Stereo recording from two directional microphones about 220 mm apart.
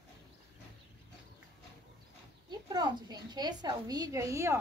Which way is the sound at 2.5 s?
20° right (ahead or behind).